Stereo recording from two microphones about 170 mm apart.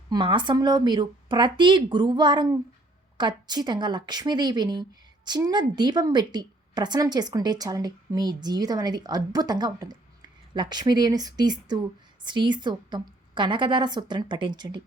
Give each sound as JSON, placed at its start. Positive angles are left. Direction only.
{"t": 0.1, "sound": "a woman's voice", "side_deg": -25}